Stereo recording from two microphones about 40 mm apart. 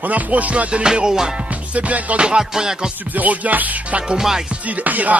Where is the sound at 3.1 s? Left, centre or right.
Right.